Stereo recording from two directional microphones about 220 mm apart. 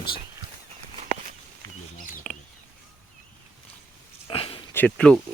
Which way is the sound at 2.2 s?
Centre (ahead or behind).